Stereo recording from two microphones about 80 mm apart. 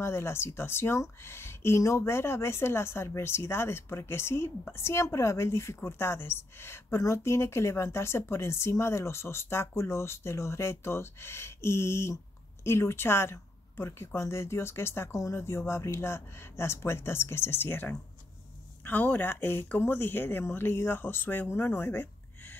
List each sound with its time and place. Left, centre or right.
0.0 s speech: left